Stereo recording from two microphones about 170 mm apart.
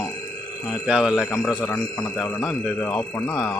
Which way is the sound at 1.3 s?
10° left (ahead or behind).